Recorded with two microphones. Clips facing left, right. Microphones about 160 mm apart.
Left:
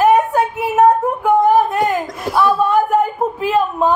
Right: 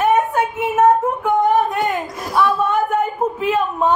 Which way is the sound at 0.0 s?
35° left (ahead or behind).